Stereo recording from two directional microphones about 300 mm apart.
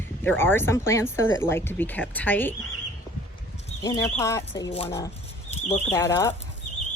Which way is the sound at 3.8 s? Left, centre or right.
Centre.